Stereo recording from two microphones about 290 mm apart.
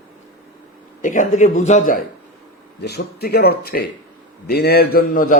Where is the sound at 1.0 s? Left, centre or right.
Left.